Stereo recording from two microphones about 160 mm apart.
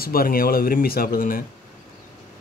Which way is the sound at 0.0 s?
65° left (ahead or behind).